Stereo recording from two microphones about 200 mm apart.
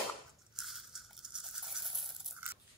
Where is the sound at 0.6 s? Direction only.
Centre (ahead or behind).